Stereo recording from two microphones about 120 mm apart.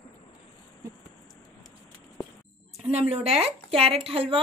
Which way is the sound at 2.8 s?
60° right (ahead or behind).